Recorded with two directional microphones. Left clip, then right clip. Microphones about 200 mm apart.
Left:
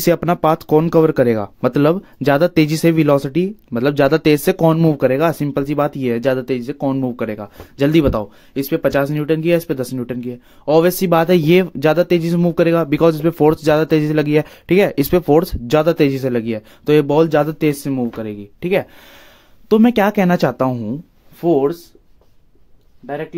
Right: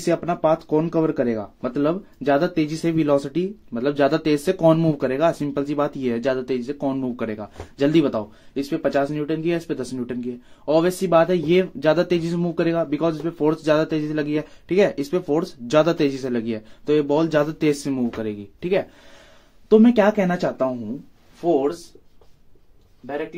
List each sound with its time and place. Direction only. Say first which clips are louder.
0.0 s speech: left 6 dB; 50° left (ahead or behind)
19.7 s speech: left 2 dB; 50° left (ahead or behind)
21.4 s speech: left 5 dB; 60° left (ahead or behind)